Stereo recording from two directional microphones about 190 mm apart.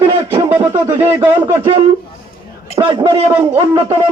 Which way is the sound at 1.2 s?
25° right (ahead or behind).